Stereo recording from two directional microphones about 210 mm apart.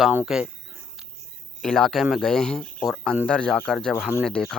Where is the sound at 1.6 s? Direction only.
Centre (ahead or behind).